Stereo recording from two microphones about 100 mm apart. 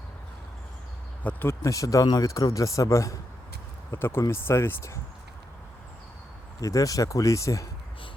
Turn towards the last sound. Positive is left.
turn(degrees=30)  # may be behind; listen again after turning